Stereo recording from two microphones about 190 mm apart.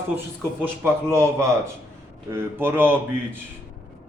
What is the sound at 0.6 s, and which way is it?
A man's voice, 15° right (ahead or behind).